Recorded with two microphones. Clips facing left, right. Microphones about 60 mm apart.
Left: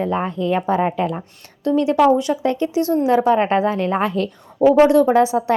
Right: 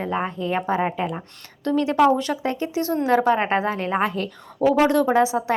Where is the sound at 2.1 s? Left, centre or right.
Right.